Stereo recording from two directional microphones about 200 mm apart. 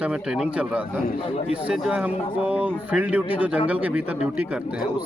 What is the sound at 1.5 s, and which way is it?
Speech, 5° right (ahead or behind).